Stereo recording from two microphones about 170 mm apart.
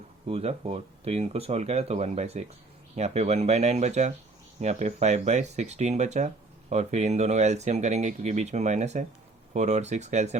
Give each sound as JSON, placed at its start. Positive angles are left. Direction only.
{"t": 0.3, "sound": "speech", "side_deg": -35}